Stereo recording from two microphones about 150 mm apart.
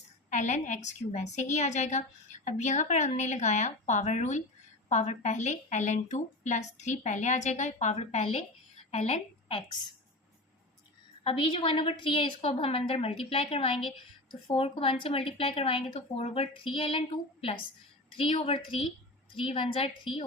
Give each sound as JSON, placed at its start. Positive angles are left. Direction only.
{"t": 0.3, "sound": "a woman's voice", "side_deg": 50}
{"t": 11.2, "sound": "a woman's voice", "side_deg": 35}
{"t": 18.2, "sound": "a woman's voice", "side_deg": 35}